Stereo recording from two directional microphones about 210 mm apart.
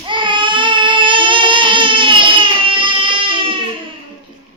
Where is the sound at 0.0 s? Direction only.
20° right (ahead or behind).